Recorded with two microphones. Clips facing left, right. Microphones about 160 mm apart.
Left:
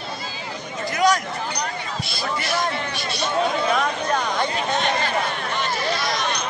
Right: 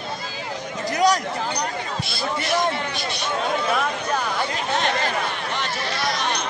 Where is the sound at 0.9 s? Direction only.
35° right (ahead or behind).